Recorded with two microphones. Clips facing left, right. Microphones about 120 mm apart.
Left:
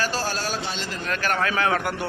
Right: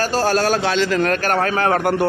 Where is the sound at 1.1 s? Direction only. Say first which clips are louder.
Right 6 dB; 45° right (ahead or behind).